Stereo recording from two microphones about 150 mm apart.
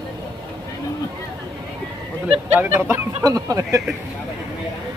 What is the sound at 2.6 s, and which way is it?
Speech, 15° right (ahead or behind).